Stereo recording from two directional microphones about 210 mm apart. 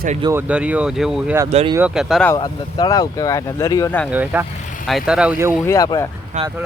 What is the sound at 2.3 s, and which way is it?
Speech, 20° left (ahead or behind).